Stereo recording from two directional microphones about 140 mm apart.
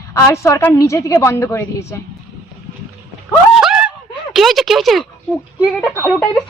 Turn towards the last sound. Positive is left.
turn(degrees=10)  # may be behind; listen again after turning